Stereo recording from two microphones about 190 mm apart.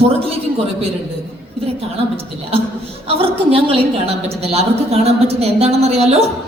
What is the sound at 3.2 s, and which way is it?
A woman's voice, 30° right (ahead or behind).